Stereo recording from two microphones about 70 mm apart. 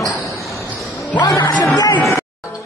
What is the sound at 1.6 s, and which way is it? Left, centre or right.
Speech, left.